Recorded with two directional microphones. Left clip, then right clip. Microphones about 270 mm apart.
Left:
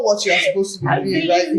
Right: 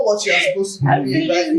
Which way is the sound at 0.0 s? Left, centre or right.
Left.